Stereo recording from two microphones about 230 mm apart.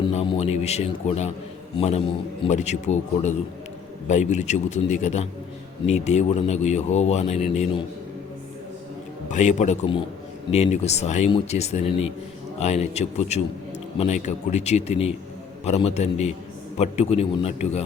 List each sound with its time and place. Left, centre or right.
0.0 s a man's voice: left
9.3 s a man's voice: left